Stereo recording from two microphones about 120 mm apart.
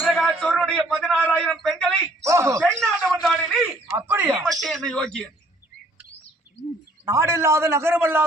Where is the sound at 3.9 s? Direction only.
20° right (ahead or behind).